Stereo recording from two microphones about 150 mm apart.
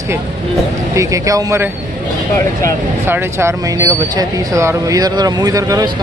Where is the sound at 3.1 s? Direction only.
15° right (ahead or behind).